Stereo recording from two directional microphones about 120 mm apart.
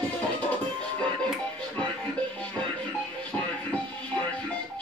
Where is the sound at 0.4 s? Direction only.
10° left (ahead or behind).